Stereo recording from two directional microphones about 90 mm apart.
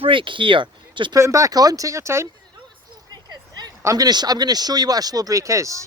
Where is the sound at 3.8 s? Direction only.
45° right (ahead or behind).